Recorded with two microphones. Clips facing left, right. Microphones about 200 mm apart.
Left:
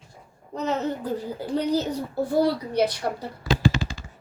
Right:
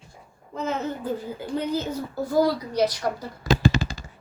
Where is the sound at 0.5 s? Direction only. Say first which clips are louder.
Left 2 dB; 40° left (ahead or behind).